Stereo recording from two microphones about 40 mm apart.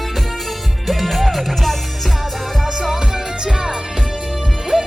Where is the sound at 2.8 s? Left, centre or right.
Centre.